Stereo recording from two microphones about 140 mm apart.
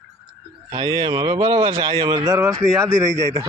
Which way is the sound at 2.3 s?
20° right (ahead or behind).